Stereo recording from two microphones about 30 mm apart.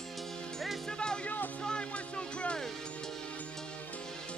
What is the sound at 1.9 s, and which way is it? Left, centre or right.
Music, left.